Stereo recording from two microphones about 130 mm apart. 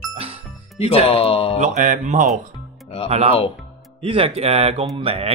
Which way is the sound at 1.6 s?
70° right (ahead or behind).